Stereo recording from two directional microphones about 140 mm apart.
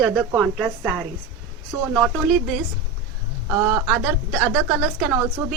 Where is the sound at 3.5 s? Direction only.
25° right (ahead or behind).